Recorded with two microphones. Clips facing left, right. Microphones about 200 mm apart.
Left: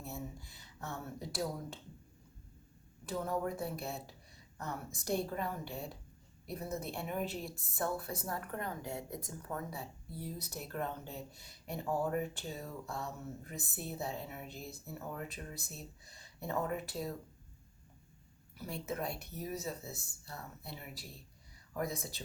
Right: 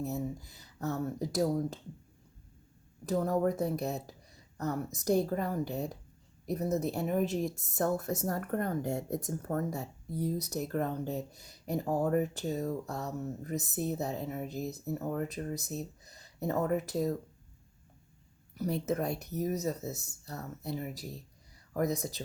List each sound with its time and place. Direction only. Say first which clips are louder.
0.0 s a woman's voice: right 9 dB; 40° right (ahead or behind)
3.1 s a woman's voice: right 7 dB; 40° right (ahead or behind)
18.5 s a woman's voice: right 9 dB; 40° right (ahead or behind)